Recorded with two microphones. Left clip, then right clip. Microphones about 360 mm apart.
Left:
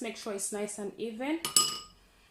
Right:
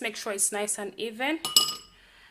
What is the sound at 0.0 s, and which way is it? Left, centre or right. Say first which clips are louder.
Speech: right 6 dB; right.